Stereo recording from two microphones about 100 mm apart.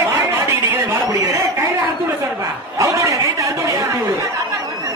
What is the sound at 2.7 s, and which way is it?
A woman's voice, 30° right (ahead or behind).